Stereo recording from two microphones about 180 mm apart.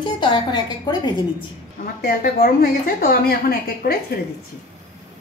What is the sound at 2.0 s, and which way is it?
A woman's voice, 55° left (ahead or behind).